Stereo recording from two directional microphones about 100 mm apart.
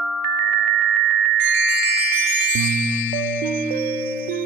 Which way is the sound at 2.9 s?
20° left (ahead or behind).